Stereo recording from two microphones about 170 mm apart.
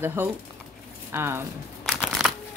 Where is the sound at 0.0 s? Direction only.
10° right (ahead or behind).